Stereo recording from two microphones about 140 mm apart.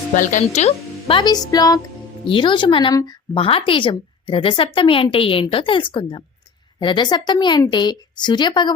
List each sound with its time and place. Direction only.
0.1 s speech: 65° left (ahead or behind)
0.5 s speech: 50° left (ahead or behind)
1.2 s speech: 30° left (ahead or behind)
2.2 s a woman's voice: 35° left (ahead or behind)